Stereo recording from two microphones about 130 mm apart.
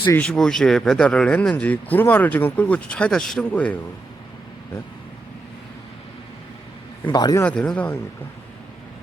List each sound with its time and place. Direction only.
0.2 s speech: 5° left (ahead or behind)
7.1 s a man's voice: 30° left (ahead or behind)
7.4 s speech: 10° left (ahead or behind)